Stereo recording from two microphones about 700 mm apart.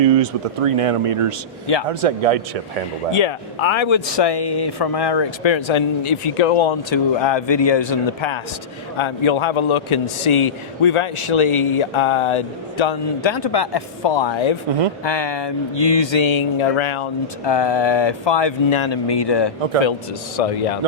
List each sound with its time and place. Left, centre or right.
0.0 s speech: right
3.1 s a man's voice: left
20.3 s a man's voice: left